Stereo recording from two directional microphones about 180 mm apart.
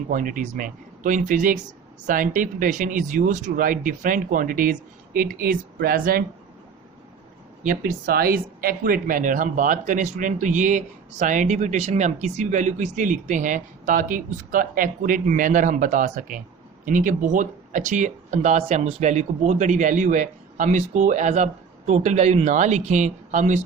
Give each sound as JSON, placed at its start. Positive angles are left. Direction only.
{"t": 0.1, "sound": "speech", "side_deg": -45}
{"t": 7.6, "sound": "speech", "side_deg": -45}